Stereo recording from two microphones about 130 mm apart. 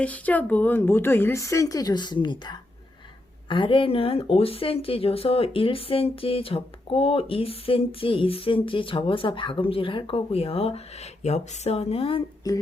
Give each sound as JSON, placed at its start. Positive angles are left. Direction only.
{"t": 0.0, "sound": "a woman's voice", "side_deg": 10}
{"t": 12.4, "sound": "a woman's voice", "side_deg": 30}